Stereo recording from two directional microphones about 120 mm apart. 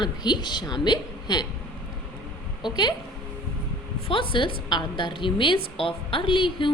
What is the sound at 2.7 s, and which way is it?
Speech, 35° left (ahead or behind).